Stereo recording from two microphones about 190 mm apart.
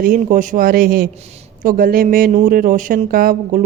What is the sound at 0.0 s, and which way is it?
A woman's voice, 45° right (ahead or behind).